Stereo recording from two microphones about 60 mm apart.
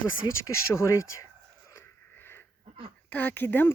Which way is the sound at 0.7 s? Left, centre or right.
Left.